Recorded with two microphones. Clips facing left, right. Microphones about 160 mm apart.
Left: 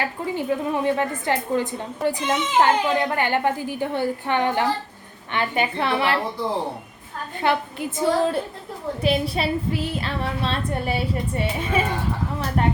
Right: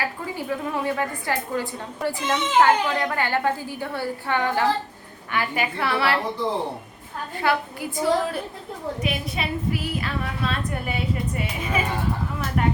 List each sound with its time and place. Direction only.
0.0 s a woman's voice: 25° left (ahead or behind)
7.4 s a woman's voice: 25° left (ahead or behind)